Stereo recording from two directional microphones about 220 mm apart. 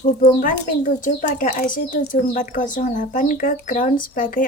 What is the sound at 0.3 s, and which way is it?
Speech, 40° left (ahead or behind).